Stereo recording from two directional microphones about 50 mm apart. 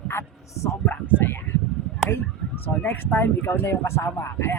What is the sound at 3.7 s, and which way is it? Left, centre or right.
Speech, left.